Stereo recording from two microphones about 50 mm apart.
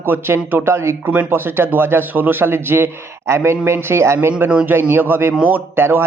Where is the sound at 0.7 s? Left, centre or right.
Right.